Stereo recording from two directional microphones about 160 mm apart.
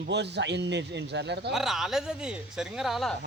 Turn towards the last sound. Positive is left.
turn(degrees=0)  # may be behind; listen again after turning